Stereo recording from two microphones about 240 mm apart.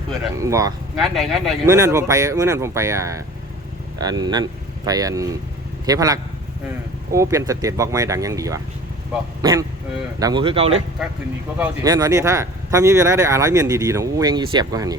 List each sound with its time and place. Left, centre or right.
0.3 s speech: centre
0.9 s speech: centre
1.6 s speech: centre